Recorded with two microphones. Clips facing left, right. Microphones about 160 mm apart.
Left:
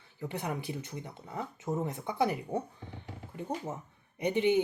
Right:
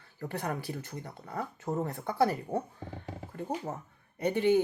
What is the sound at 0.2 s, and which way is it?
Speech, 15° left (ahead or behind).